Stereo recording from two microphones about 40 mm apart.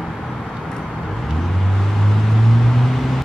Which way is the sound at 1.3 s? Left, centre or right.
Centre.